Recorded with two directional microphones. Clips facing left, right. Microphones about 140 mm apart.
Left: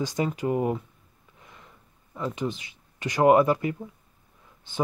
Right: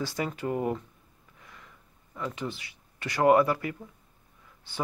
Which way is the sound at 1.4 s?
20° left (ahead or behind).